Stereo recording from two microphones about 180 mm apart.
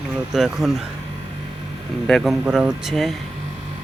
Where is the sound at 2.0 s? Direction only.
Centre (ahead or behind).